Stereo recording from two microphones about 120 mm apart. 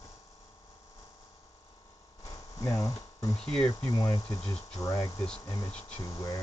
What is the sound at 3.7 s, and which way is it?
Speech, 30° left (ahead or behind).